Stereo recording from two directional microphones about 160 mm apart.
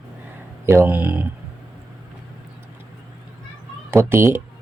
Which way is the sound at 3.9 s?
15° right (ahead or behind).